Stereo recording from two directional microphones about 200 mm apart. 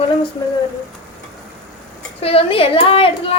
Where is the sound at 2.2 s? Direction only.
30° left (ahead or behind).